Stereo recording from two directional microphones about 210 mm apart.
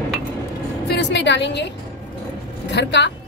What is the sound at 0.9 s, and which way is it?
A woman's voice, 55° left (ahead or behind).